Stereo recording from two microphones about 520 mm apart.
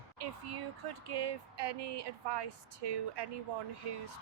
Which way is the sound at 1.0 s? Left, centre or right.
Right.